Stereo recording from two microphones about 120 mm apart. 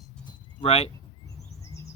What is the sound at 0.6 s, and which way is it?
Speech, 60° left (ahead or behind).